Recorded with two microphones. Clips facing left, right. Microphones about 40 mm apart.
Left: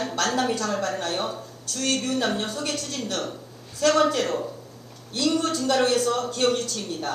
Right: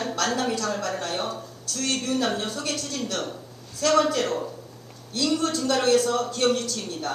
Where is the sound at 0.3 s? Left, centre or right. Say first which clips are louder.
Left 2 dB; left.